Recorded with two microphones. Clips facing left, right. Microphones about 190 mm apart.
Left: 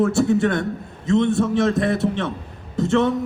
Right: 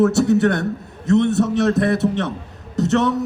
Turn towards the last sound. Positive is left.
turn(degrees=-80)